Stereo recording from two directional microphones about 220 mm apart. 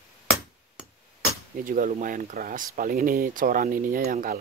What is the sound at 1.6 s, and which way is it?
Speech, 40° right (ahead or behind).